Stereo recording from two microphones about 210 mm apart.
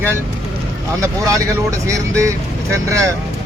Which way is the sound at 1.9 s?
15° right (ahead or behind).